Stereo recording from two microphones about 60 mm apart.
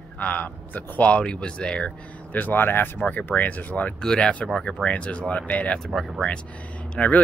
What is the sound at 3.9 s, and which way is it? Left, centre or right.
Speech, centre.